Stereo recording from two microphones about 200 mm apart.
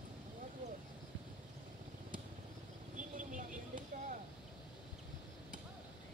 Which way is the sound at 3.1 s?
40° right (ahead or behind).